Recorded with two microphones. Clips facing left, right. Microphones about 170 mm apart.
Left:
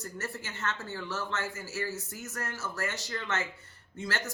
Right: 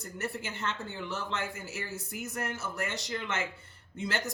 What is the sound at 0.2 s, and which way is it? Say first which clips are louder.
Speech: right 4 dB; 20° right (ahead or behind).